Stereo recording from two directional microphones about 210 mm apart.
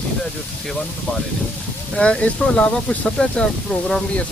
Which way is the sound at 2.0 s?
5° left (ahead or behind).